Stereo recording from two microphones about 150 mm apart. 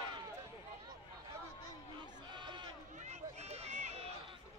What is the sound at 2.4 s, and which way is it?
Run, 30° right (ahead or behind).